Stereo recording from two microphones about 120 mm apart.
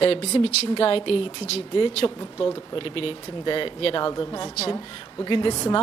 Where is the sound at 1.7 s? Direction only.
45° left (ahead or behind).